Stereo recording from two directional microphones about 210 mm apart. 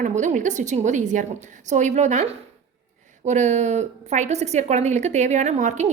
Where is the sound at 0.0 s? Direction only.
35° right (ahead or behind).